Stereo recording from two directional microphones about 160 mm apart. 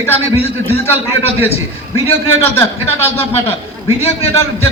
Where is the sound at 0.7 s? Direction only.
15° left (ahead or behind).